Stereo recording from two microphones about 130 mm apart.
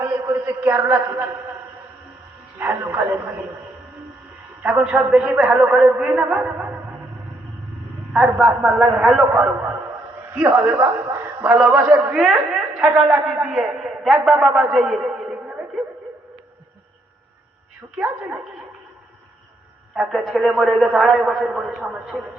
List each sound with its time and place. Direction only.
0.3 s a man's voice: 10° right (ahead or behind)
2.6 s a man's voice: 15° right (ahead or behind)
4.6 s a man's voice: 10° right (ahead or behind)
8.1 s a man's voice: 5° right (ahead or behind)
12.1 s a man's voice: 5° right (ahead or behind)
17.9 s a man's voice: 10° right (ahead or behind)
20.0 s a man's voice: centre (ahead or behind)